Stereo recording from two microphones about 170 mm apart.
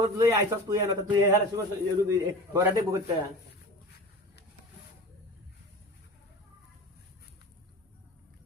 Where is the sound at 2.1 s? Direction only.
20° right (ahead or behind).